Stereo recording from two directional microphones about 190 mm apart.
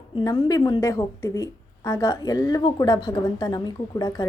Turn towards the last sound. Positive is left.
turn(degrees=20)  # may be behind; listen again after turning